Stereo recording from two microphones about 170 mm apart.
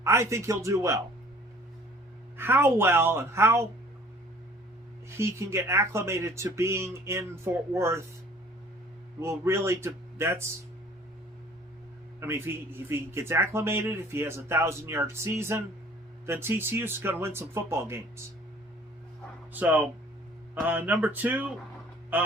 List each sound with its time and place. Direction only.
0.0 s a man's voice: 15° right (ahead or behind)
2.4 s a man's voice: 15° right (ahead or behind)
5.0 s a man's voice: 15° right (ahead or behind)
9.2 s a man's voice: 15° right (ahead or behind)
12.2 s a man's voice: 15° right (ahead or behind)
19.5 s a man's voice: 10° right (ahead or behind)